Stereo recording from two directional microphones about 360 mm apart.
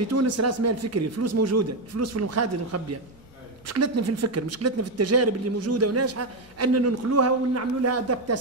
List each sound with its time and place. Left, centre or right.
0.0 s speech: right